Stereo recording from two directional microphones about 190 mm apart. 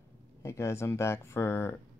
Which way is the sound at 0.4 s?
15° left (ahead or behind).